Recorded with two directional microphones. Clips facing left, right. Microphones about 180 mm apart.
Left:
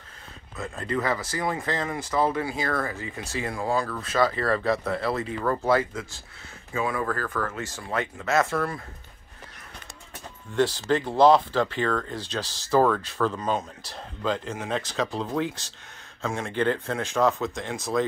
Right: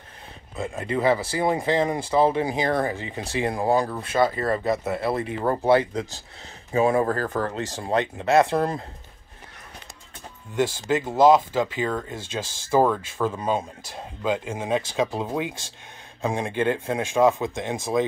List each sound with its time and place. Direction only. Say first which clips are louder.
0.6 s speech: right 3 dB; 15° right (ahead or behind); by 7.9 s 40° right (ahead or behind)
7.9 s speech: right 6 dB; 20° right (ahead or behind)
10.5 s speech: even; 10° right (ahead or behind)